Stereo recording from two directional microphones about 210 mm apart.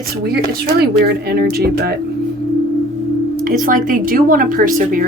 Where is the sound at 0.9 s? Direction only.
50° right (ahead or behind).